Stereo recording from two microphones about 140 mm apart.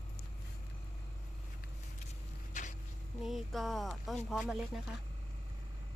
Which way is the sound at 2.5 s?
60° left (ahead or behind).